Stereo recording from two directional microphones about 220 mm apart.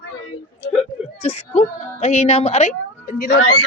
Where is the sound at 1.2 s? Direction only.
30° left (ahead or behind).